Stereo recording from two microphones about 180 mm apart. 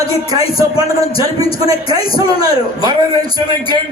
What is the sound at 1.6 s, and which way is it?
A man's voice, 20° right (ahead or behind).